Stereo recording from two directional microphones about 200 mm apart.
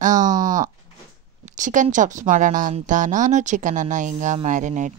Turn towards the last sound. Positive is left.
turn(degrees=-35)  # may be behind; listen again after turning